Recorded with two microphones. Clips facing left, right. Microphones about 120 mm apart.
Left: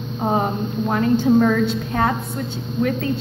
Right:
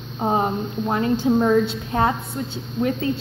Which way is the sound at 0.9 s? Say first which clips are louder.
Left 3 dB; 25° right (ahead or behind).